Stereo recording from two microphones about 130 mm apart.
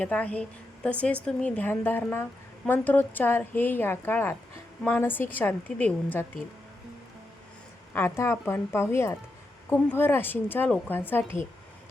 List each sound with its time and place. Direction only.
0.0 s a woman's voice: 10° left (ahead or behind)
7.9 s a woman's voice: 20° left (ahead or behind)